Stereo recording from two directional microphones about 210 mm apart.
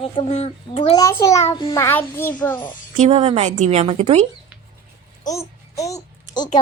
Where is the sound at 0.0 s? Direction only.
30° left (ahead or behind).